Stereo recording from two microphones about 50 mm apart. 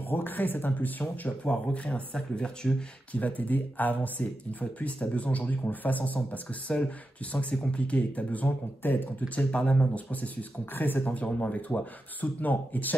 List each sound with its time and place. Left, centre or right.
0.1 s speech: left
1.5 s speech: left
3.2 s speech: left
9.3 s speech: left
10.2 s speech: left